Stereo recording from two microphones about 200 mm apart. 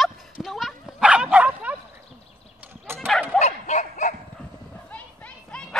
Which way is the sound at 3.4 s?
35° left (ahead or behind).